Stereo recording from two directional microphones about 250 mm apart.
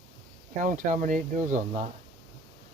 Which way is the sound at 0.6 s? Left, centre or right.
Right.